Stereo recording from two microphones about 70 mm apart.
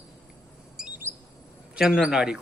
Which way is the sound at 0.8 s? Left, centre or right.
Centre.